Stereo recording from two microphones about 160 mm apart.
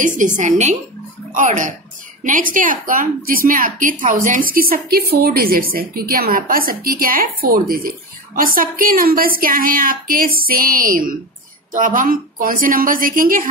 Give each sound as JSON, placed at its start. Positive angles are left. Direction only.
{"t": 0.4, "sound": "a woman's voice", "side_deg": -50}